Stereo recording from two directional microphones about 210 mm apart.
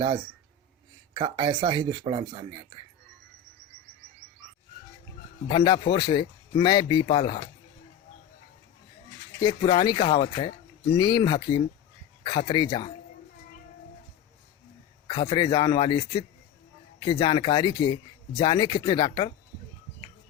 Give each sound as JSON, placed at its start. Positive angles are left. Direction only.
{"t": 1.1, "sound": "speech", "side_deg": -25}
{"t": 5.5, "sound": "speech", "side_deg": 20}
{"t": 9.4, "sound": "speech", "side_deg": 20}
{"t": 15.0, "sound": "speech", "side_deg": 20}